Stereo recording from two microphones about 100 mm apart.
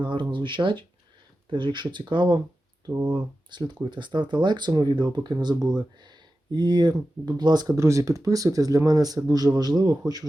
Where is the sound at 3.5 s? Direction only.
50° right (ahead or behind).